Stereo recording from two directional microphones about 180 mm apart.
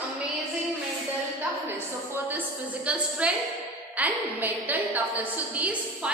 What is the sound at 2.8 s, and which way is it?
A woman's voice, 5° right (ahead or behind).